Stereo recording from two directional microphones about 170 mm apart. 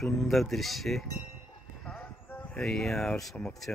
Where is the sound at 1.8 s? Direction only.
5° left (ahead or behind).